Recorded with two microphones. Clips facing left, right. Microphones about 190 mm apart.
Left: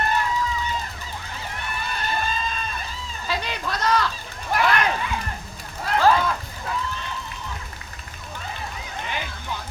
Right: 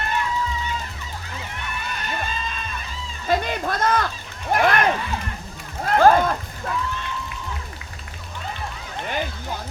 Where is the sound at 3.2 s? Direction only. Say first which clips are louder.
Right 6 dB; 50° right (ahead or behind).